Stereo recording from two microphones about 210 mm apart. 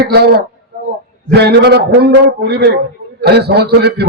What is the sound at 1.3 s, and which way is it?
A man's voice, 50° right (ahead or behind).